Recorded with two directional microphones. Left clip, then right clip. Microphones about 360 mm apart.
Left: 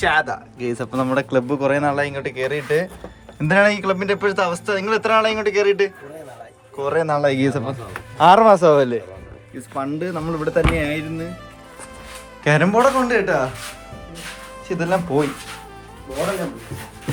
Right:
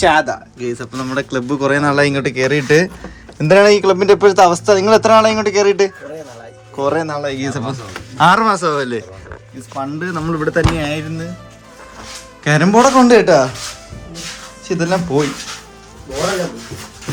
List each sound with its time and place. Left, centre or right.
0.0 s speech: centre
0.6 s speech: centre
9.7 s speech: right
10.3 s speech: left
12.5 s speech: centre
14.7 s speech: centre